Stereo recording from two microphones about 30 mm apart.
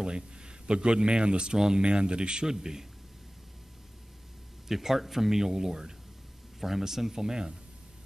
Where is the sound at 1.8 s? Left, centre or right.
Right.